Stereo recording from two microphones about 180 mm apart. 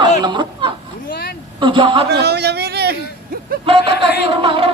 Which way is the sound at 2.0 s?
65° right (ahead or behind).